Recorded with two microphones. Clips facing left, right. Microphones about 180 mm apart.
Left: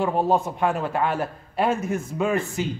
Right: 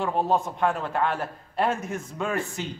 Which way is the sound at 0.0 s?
5° left (ahead or behind).